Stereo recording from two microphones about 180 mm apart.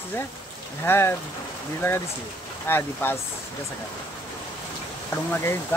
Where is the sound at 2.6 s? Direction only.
15° left (ahead or behind).